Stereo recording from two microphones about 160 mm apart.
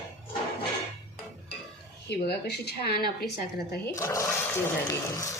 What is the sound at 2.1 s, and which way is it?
A woman's voice, 90° left.